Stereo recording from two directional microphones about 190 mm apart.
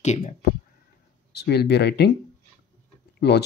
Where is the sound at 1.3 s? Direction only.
60° left (ahead or behind).